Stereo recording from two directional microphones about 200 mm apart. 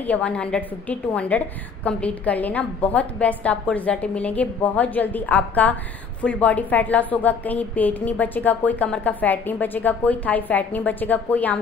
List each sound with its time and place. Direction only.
0.0 s a woman's voice: 5° left (ahead or behind)